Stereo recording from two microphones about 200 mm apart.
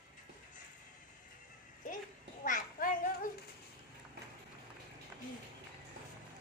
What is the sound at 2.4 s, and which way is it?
Children playing, 40° left (ahead or behind).